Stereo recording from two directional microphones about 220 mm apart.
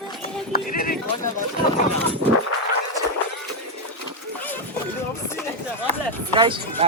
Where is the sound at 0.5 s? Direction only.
40° left (ahead or behind).